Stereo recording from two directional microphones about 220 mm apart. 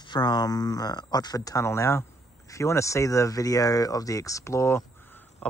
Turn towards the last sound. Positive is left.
turn(degrees=10)  # may be behind; listen again after turning